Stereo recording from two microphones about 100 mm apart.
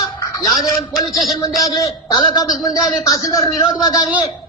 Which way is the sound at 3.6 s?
45° left (ahead or behind).